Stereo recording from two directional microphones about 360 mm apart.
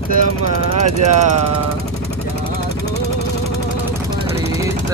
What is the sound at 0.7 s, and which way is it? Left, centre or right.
Speech, right.